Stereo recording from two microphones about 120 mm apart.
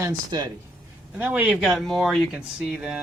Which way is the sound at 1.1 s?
15° right (ahead or behind).